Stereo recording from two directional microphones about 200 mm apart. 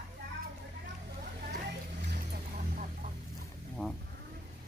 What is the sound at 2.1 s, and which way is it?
Vehicle, 45° right (ahead or behind).